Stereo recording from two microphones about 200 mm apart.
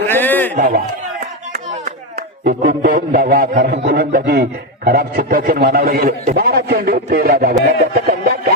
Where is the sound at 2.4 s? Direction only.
45° right (ahead or behind).